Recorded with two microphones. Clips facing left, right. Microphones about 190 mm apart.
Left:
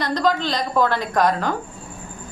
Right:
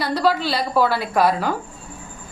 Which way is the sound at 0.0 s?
5° right (ahead or behind).